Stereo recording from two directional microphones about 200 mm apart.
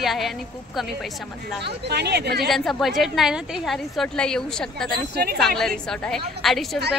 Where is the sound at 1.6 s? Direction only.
55° right (ahead or behind).